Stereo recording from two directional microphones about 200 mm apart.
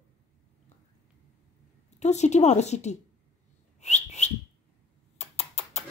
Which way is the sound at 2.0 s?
35° left (ahead or behind).